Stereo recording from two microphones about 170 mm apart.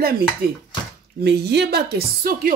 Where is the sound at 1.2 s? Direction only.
75° right (ahead or behind); by 2.5 s 60° right (ahead or behind).